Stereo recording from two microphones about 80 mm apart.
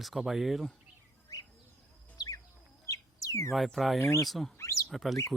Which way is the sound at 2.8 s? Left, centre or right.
Left.